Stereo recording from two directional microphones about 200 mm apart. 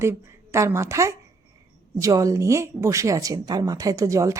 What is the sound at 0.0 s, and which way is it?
A woman's voice, 15° right (ahead or behind).